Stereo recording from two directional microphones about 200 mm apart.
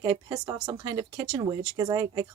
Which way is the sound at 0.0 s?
20° right (ahead or behind).